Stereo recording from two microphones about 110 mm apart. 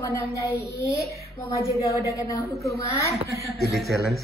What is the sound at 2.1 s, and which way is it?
Speech, 30° left (ahead or behind).